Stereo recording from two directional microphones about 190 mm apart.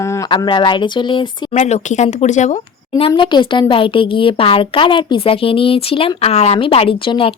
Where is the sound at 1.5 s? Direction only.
40° left (ahead or behind).